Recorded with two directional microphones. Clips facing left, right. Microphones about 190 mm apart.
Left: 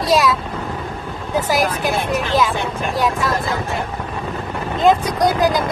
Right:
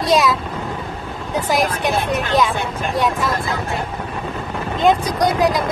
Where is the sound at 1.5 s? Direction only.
Centre (ahead or behind).